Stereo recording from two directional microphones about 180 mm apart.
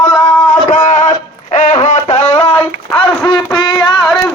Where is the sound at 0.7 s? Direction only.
45° left (ahead or behind); by 3.7 s 25° left (ahead or behind).